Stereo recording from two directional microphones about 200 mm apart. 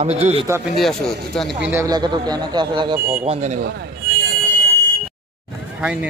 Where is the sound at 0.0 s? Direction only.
35° right (ahead or behind).